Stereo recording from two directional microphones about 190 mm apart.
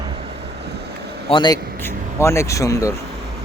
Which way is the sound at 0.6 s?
60° right (ahead or behind).